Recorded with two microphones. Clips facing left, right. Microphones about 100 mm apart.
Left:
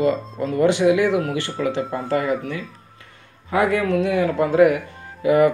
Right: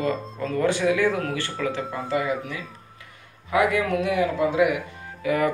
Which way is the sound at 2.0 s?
40° left (ahead or behind).